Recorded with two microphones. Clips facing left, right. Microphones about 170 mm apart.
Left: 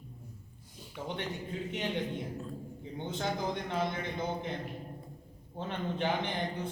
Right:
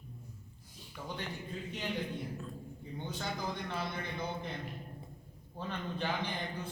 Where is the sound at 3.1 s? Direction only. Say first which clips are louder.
Left 5 dB; 25° left (ahead or behind).